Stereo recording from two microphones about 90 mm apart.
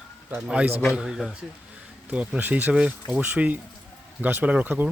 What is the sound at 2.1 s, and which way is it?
Speech, 15° right (ahead or behind).